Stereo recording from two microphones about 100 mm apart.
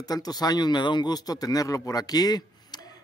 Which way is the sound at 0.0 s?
40° left (ahead or behind).